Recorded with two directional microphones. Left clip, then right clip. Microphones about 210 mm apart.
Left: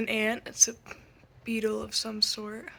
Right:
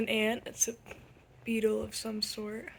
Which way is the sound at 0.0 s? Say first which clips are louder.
Left 2 dB; centre (ahead or behind).